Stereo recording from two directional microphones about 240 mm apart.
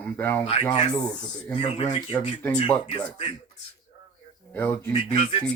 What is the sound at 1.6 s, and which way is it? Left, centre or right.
Speech, left.